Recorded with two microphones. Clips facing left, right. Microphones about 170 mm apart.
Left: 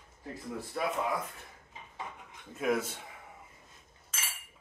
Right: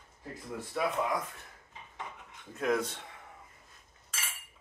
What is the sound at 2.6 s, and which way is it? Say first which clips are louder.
Speech: even; 5° left (ahead or behind).